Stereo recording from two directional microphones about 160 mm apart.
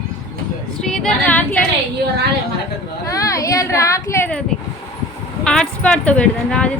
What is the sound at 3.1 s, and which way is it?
Speech, 20° left (ahead or behind).